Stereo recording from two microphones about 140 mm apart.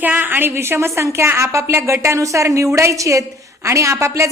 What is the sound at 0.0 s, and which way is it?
A woman's voice, 15° right (ahead or behind).